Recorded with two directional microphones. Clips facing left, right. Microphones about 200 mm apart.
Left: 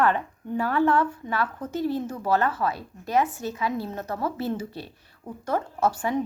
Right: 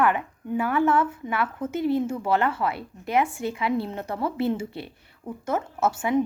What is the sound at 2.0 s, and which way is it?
Speech, 25° right (ahead or behind).